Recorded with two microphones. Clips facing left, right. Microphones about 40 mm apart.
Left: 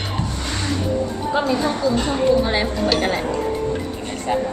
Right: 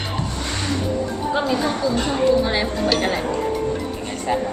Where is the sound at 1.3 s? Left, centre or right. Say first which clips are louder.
Left 2 dB; centre.